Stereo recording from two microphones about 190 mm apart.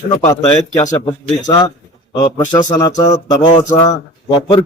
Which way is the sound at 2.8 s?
20° left (ahead or behind).